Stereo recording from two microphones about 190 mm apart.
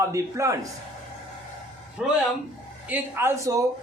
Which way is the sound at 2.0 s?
5° right (ahead or behind).